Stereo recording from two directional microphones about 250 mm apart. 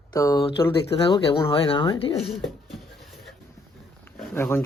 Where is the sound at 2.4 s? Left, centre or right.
Centre.